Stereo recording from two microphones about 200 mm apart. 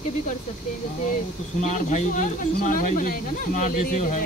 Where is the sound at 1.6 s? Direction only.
35° left (ahead or behind).